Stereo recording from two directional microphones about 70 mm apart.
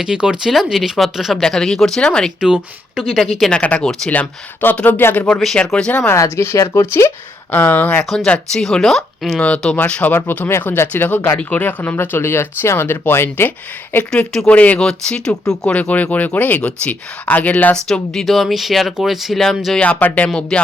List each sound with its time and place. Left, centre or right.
0.0 s speech: centre
2.4 s speech: centre
3.5 s speech: centre
5.5 s speech: centre
6.1 s speech: left
7.5 s speech: left
8.3 s speech: centre
9.4 s speech: centre
14.4 s speech: left
14.8 s speech: centre
17.8 s speech: centre
19.8 s speech: left